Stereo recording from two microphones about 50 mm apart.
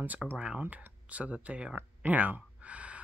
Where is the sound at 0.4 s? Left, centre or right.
Right.